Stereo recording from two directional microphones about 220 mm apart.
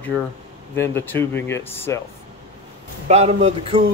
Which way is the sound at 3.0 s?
30° right (ahead or behind).